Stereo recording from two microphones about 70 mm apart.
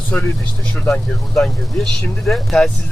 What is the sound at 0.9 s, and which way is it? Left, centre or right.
Speech, centre.